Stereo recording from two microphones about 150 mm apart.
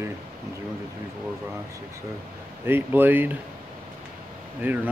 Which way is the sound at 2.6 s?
15° right (ahead or behind).